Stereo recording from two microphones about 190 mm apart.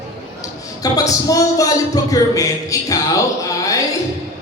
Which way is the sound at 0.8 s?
20° left (ahead or behind).